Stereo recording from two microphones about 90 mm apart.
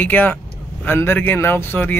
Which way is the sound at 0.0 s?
20° left (ahead or behind).